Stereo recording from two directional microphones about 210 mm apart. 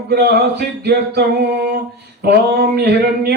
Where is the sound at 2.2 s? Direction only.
50° right (ahead or behind).